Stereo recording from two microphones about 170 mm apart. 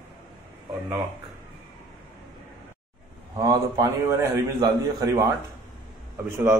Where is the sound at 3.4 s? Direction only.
20° right (ahead or behind).